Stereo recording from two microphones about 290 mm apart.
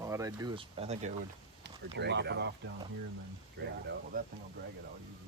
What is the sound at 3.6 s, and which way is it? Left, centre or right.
Speech, right.